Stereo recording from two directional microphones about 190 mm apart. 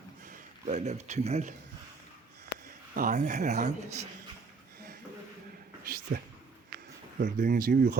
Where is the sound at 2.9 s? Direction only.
45° right (ahead or behind).